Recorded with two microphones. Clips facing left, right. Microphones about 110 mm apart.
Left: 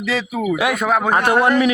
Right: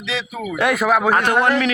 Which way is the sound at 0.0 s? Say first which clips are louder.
Left 4 dB; 45° left (ahead or behind).